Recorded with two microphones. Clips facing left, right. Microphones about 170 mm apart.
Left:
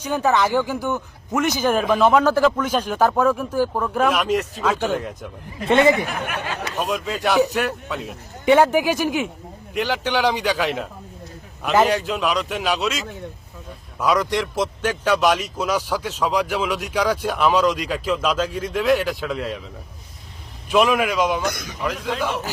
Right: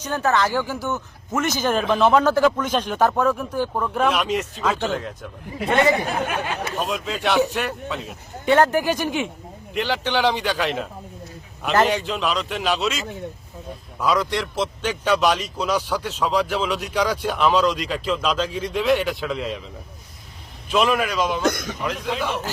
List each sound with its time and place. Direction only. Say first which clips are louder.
0.0 s a man's voice: left 2 dB; 10° left (ahead or behind)
5.6 s speech: left 3 dB; 20° left (ahead or behind)
6.1 s speech: right 3 dB; 30° right (ahead or behind)
6.7 s a man's voice: left 5 dB; 5° left (ahead or behind)
20.7 s a man's voice: left 2 dB; 10° left (ahead or behind)
21.4 s a man's voice: right 4 dB; 50° right (ahead or behind)
21.8 s a man's voice: left 1 dB; centre (ahead or behind)